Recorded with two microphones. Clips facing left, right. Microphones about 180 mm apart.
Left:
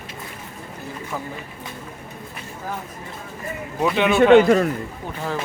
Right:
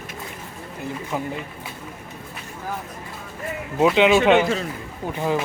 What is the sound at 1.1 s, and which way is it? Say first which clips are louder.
Speech: right 4 dB; 20° right (ahead or behind).